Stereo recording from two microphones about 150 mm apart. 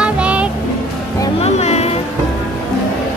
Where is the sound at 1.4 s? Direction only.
45° left (ahead or behind).